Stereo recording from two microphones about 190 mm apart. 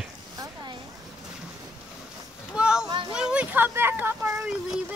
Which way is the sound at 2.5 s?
5° right (ahead or behind).